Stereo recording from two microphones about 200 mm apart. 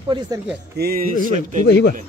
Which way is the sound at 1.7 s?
55° left (ahead or behind).